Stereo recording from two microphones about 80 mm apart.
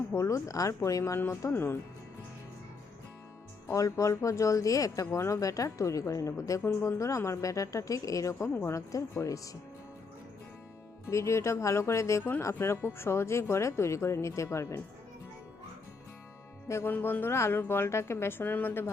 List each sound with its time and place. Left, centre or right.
0.1 s speech: left
1.4 s a woman's voice: left
3.7 s speech: left
8.9 s speech: left
11.0 s speech: left
16.6 s a woman's voice: left